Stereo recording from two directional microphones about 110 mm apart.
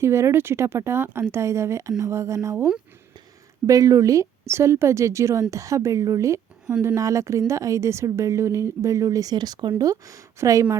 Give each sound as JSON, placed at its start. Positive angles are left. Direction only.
{"t": 0.0, "sound": "a woman's voice", "side_deg": -25}
{"t": 3.7, "sound": "a woman's voice", "side_deg": -30}